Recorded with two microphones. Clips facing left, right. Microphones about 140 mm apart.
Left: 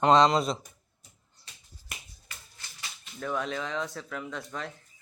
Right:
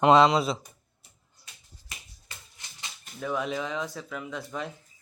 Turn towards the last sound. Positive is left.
turn(degrees=-10)  # may be behind; listen again after turning